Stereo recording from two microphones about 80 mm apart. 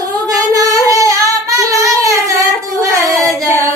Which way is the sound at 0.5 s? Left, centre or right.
Right.